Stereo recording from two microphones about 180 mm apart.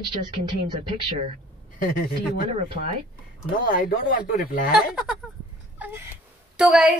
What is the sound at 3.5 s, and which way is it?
Speech, 50° left (ahead or behind).